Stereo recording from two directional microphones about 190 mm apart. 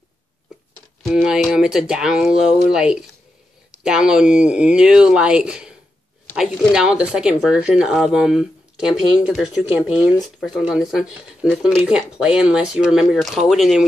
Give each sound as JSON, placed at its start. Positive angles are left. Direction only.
{"t": 1.0, "sound": "speech", "side_deg": -5}